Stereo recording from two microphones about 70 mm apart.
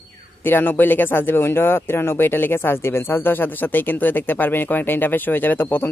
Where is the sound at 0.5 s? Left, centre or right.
Left.